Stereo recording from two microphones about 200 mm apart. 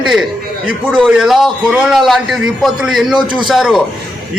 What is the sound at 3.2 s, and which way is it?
Speech, 25° right (ahead or behind).